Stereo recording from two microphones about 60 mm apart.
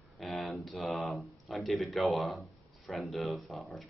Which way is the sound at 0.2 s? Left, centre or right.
Centre.